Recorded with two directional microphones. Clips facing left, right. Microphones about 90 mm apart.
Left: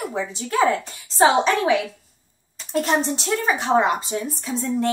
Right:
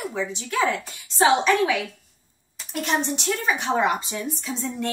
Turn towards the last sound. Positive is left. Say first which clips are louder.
# left 5 dB
turn(degrees=30)  # may be behind; listen again after turning